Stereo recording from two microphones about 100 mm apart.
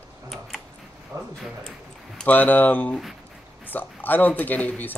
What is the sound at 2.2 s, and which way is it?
Speech, 15° left (ahead or behind).